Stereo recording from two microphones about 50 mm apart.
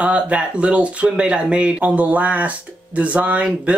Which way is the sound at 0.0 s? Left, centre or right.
Right.